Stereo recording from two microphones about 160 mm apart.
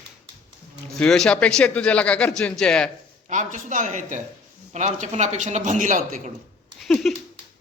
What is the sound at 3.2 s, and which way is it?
A man's voice, 50° right (ahead or behind).